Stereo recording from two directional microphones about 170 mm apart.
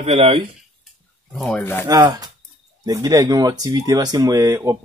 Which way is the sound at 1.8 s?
20° right (ahead or behind).